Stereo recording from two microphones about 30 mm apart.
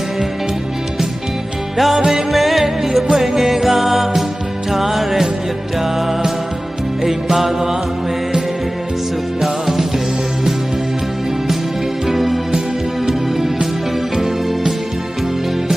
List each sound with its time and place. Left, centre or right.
1.7 s music: centre
2.3 s music: centre
9.4 s music: centre
12.0 s music: centre